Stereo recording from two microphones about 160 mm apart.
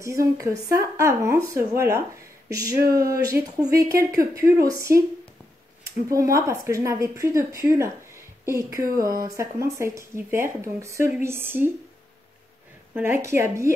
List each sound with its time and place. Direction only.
0.0 s speech: 20° right (ahead or behind)
6.0 s speech: 20° right (ahead or behind)
12.9 s speech: 15° right (ahead or behind)